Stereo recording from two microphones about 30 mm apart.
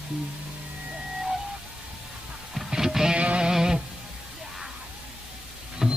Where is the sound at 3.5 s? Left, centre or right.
Centre.